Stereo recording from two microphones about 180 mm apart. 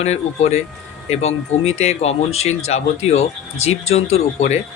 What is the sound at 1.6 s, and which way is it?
Speech, 35° left (ahead or behind).